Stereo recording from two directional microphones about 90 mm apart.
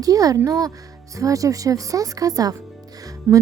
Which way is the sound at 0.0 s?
40° right (ahead or behind).